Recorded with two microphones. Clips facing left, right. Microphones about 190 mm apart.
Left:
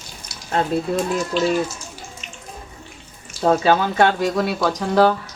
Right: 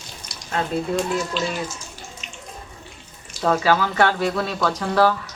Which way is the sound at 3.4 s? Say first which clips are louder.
Left 3 dB; 25° left (ahead or behind).